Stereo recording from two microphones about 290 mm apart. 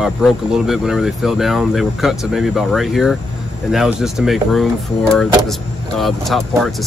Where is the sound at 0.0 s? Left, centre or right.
Centre.